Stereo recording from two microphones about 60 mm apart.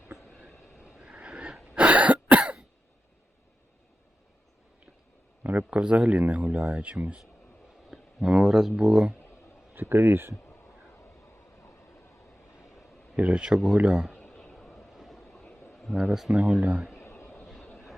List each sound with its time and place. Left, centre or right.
0.4 s vehicle: centre
1.7 s cough: right
5.4 s speech: right
7.9 s speech: centre
9.9 s speech: right
13.1 s speech: right
14.2 s a sound: centre
14.5 s vehicle: centre
15.7 s a sound: centre
16.0 s speech: centre
16.3 s speech: right
16.9 s a sound: left
17.3 s vehicle: centre